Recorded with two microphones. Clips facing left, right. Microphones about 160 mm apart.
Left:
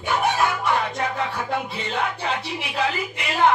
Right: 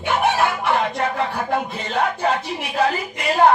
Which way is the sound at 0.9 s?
60° right (ahead or behind).